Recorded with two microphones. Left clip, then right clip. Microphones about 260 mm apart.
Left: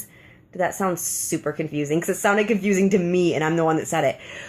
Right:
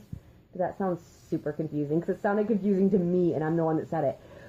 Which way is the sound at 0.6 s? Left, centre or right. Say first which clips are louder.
Left 7 dB; centre.